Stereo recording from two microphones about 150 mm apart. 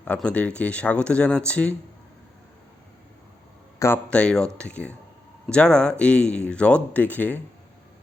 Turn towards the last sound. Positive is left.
turn(degrees=10)  # may be behind; listen again after turning